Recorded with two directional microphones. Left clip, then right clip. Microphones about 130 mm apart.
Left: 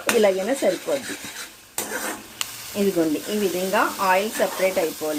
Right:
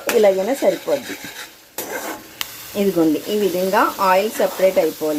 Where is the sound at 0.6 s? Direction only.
15° right (ahead or behind).